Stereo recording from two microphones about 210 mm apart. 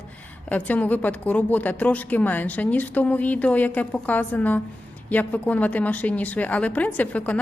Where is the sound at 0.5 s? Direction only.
5° left (ahead or behind).